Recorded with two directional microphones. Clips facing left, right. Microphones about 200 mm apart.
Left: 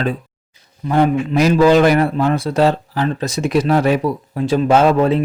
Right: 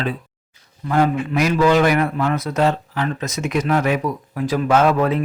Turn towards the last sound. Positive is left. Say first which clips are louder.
# left 3 dB
turn(degrees=30)  # may be behind; listen again after turning